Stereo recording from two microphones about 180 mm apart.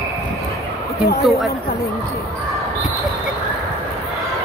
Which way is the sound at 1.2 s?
Centre (ahead or behind).